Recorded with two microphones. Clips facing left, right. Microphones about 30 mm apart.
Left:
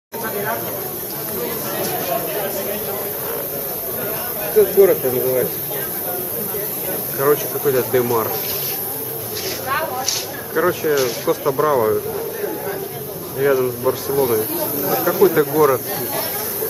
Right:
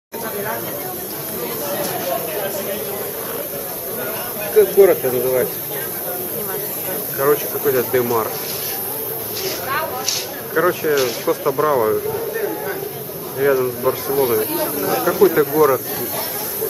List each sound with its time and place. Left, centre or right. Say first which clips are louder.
0.2 s a sound: left 2 dB; centre
4.6 s speech: right 1 dB; centre
6.9 s speech: even; centre
9.7 s a sound: left 2 dB; centre
10.5 s speech: right 1 dB; centre
13.4 s speech: even; centre
14.1 s speech: right 1 dB; centre
15.0 s speech: even; centre